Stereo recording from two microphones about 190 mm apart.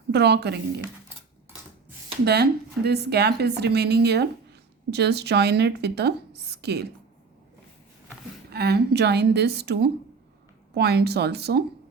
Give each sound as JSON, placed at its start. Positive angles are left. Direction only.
{"t": 0.1, "sound": "a woman's voice", "side_deg": -60}
{"t": 2.2, "sound": "a woman's voice", "side_deg": -60}
{"t": 8.4, "sound": "a woman's voice", "side_deg": -60}